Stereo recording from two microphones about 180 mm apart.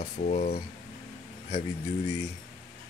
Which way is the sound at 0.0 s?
45° left (ahead or behind).